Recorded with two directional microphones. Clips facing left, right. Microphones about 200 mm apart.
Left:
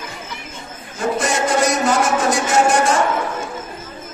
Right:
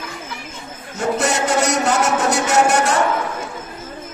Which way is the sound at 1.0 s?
70° right (ahead or behind).